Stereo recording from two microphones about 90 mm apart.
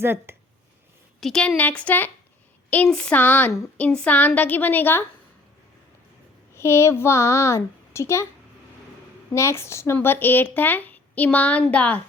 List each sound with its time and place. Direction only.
0.0 s speech: 25° right (ahead or behind)
1.2 s speech: 5° left (ahead or behind); by 5.0 s 25° left (ahead or behind)
6.5 s a child's voice: 30° left (ahead or behind)
9.3 s speech: 30° left (ahead or behind); by 12.0 s 15° left (ahead or behind)